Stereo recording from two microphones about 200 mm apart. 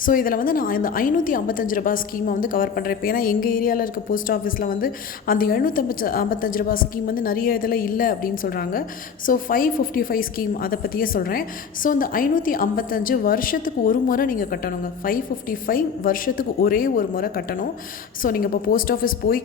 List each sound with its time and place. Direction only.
0.0 s a woman's voice: 45° left (ahead or behind)